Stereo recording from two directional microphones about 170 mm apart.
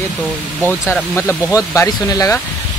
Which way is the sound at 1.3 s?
20° left (ahead or behind).